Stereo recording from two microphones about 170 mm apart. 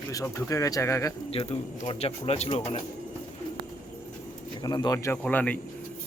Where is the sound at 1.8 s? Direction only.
35° left (ahead or behind).